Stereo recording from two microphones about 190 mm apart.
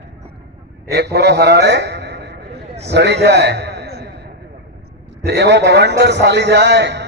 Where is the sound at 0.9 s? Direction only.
60° right (ahead or behind).